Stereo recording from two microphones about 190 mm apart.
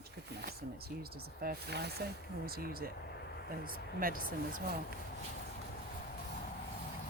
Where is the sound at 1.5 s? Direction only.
55° right (ahead or behind).